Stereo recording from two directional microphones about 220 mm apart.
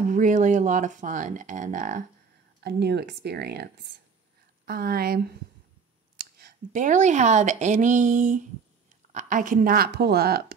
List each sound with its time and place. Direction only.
0.1 s speech: 35° right (ahead or behind)
2.6 s speech: 50° right (ahead or behind)